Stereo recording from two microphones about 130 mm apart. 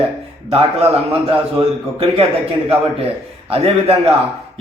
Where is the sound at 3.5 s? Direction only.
50° right (ahead or behind).